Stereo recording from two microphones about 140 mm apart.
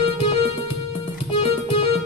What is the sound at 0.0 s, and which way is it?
Music, 45° left (ahead or behind).